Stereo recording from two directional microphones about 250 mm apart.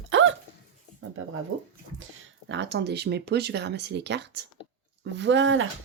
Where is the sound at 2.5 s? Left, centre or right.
Right.